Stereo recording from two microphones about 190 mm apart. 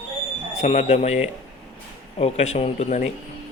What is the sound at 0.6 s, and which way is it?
Speech, 35° left (ahead or behind).